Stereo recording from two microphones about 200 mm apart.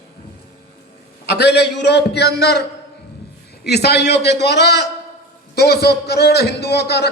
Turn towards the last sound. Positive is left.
turn(degrees=55)  # may be behind; listen again after turning